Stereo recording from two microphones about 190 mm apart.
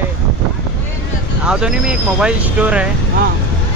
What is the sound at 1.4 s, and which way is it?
Speech, 5° right (ahead or behind).